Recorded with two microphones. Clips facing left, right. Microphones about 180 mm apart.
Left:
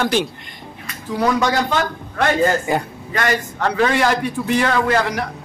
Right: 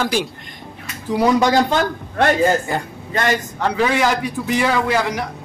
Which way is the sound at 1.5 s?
35° right (ahead or behind).